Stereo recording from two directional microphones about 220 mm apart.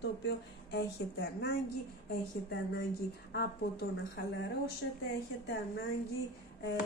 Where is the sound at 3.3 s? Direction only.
45° left (ahead or behind).